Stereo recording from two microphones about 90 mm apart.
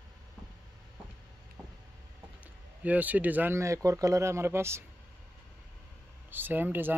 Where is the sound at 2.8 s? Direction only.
15° right (ahead or behind).